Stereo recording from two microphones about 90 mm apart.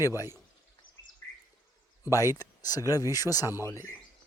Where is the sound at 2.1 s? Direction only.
40° left (ahead or behind).